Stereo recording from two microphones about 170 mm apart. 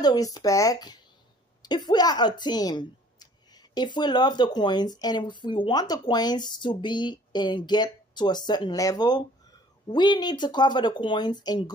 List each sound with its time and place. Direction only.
0.0 s speech: 20° left (ahead or behind)